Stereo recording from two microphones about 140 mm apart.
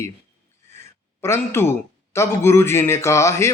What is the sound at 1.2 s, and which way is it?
Speech, 20° left (ahead or behind).